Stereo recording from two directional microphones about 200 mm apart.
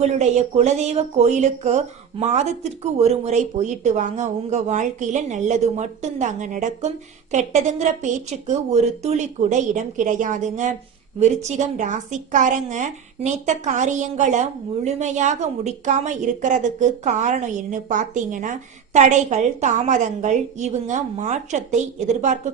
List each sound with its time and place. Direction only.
0.0 s speech: 35° right (ahead or behind)